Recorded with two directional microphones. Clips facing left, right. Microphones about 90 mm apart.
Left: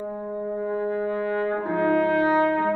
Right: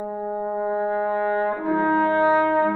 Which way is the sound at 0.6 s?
40° right (ahead or behind).